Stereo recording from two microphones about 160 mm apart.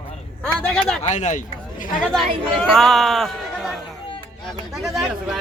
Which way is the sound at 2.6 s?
Centre (ahead or behind).